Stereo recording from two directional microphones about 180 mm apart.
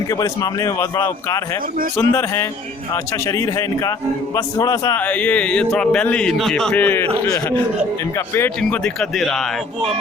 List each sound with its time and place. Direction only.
0.1 s speech: 20° left (ahead or behind)
4.9 s speech: 10° left (ahead or behind)